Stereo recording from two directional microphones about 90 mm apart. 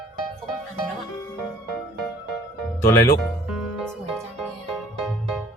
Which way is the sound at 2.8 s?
30° left (ahead or behind).